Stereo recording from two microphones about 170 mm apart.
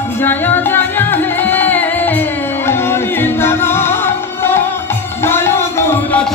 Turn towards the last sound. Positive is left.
turn(degrees=10)  # may be behind; listen again after turning